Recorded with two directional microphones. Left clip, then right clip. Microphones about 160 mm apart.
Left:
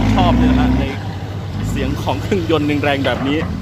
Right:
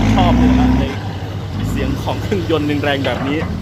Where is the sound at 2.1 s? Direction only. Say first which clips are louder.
Left 2 dB; 20° left (ahead or behind).